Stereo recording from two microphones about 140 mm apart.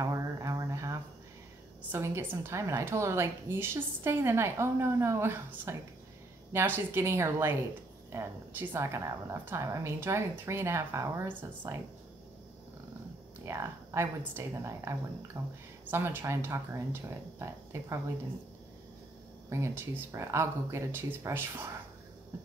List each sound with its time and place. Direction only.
0.0 s a sound: 25° right (ahead or behind)
1.9 s a woman's voice: 20° right (ahead or behind)
13.5 s a woman's voice: 20° right (ahead or behind)
15.3 s speech: 35° right (ahead or behind)
15.9 s speech: 15° right (ahead or behind)
19.5 s a woman's voice: 20° right (ahead or behind)